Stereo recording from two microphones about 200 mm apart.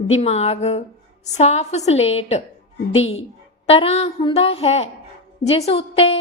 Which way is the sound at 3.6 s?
30° left (ahead or behind).